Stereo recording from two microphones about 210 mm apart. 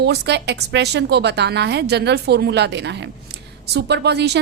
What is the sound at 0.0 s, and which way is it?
A woman's voice, 55° right (ahead or behind).